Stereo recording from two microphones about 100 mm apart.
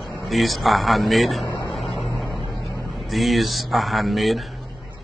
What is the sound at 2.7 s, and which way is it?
Vehicle, 30° left (ahead or behind).